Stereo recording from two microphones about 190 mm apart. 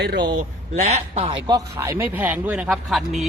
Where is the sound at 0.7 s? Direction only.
40° right (ahead or behind).